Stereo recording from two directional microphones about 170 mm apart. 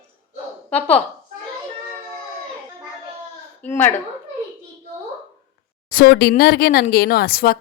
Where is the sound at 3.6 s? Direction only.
10° left (ahead or behind).